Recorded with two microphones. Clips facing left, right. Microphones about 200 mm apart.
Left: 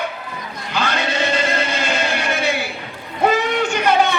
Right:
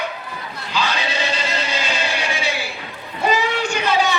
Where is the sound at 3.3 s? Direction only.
55° left (ahead or behind).